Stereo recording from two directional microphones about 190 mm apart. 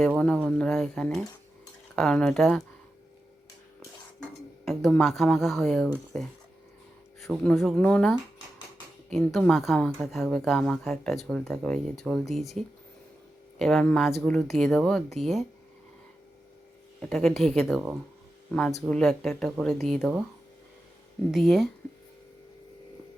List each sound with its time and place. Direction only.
0.4 s speech: 5° left (ahead or behind)
4.2 s speech: centre (ahead or behind)
17.0 s speech: 5° left (ahead or behind)
21.3 s speech: centre (ahead or behind)